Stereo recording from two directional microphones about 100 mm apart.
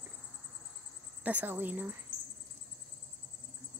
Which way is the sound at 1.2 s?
20° right (ahead or behind).